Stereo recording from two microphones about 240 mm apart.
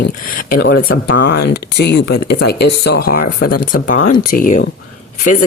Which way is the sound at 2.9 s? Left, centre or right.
Left.